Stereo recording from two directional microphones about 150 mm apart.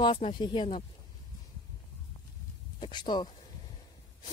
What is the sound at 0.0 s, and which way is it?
Speech, 35° left (ahead or behind).